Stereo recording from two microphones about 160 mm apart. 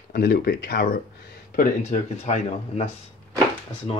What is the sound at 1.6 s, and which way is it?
Speech, 45° left (ahead or behind).